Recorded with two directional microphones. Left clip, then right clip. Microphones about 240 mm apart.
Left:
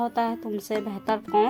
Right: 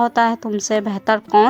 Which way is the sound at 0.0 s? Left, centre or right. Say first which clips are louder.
Right 10 dB; centre.